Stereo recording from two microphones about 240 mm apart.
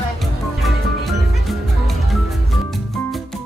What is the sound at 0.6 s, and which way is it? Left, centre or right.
Music, centre.